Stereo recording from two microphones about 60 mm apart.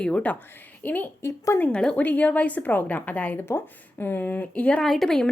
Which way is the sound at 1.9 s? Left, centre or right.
Left.